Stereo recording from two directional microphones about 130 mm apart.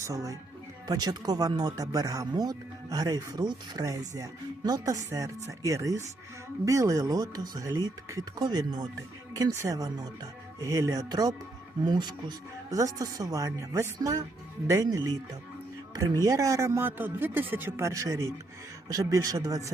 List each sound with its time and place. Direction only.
0.0 s speech: 25° right (ahead or behind)
16.2 s speech: 25° right (ahead or behind)